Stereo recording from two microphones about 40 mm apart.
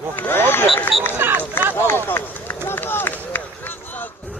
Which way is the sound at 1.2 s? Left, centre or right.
Right.